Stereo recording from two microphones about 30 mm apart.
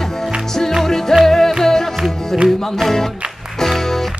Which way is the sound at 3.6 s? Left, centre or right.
Centre.